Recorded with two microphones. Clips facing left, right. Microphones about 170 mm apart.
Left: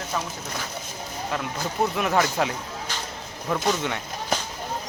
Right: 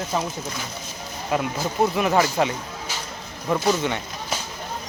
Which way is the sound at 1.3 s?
15° right (ahead or behind).